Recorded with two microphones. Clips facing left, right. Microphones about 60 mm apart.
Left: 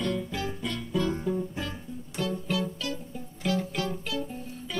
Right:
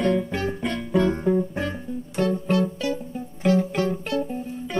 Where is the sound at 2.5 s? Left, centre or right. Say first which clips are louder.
Right 8 dB; right.